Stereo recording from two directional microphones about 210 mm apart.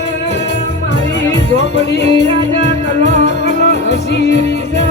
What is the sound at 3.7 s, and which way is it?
Music, 55° left (ahead or behind).